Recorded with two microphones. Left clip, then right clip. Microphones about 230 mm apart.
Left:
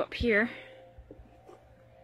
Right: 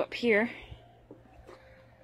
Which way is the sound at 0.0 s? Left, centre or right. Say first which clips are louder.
Even; centre.